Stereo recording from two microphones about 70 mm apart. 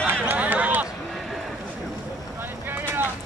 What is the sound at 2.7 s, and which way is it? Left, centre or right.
Vehicle, right.